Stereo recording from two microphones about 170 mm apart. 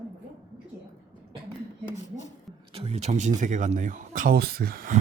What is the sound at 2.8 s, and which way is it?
Speech, 40° right (ahead or behind).